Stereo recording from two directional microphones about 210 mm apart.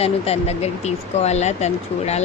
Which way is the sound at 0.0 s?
30° left (ahead or behind).